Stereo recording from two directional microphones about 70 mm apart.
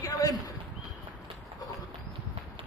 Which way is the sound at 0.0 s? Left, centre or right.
Left.